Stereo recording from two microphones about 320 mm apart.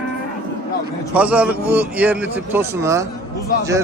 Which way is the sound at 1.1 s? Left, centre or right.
Centre.